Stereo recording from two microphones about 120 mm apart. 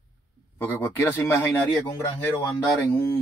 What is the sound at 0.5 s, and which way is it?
Speech, 15° left (ahead or behind).